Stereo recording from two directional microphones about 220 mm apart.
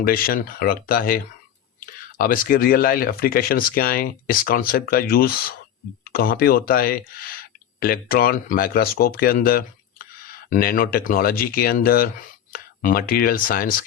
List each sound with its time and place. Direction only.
0.0 s speech: 40° left (ahead or behind)